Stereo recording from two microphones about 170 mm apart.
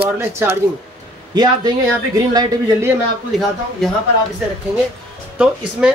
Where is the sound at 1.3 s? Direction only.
25° right (ahead or behind).